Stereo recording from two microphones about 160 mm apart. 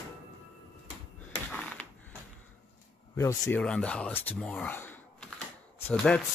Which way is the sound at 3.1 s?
15° left (ahead or behind).